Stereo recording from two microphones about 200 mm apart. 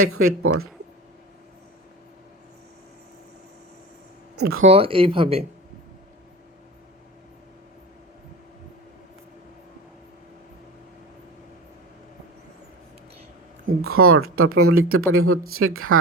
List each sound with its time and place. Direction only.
0.0 s speech: 90° right
4.6 s speech: 30° right (ahead or behind)
13.7 s speech: 90° right